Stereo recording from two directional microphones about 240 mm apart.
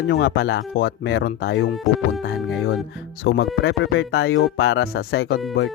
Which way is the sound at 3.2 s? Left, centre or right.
Left.